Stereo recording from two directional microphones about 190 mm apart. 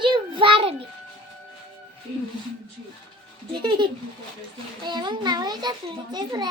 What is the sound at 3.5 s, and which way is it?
A child's voice, 25° right (ahead or behind).